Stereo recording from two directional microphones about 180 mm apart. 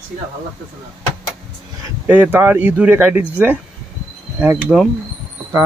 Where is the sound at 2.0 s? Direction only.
10° right (ahead or behind).